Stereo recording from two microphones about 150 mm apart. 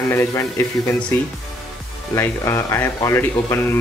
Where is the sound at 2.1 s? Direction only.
20° left (ahead or behind).